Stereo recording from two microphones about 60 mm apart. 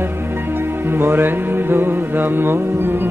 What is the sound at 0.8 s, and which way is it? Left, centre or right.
Music, right.